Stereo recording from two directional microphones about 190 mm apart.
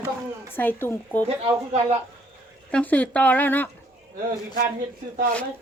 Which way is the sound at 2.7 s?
5° left (ahead or behind).